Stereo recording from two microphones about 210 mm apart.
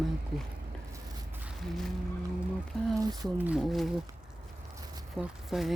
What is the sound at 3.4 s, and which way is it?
Speech, 5° right (ahead or behind).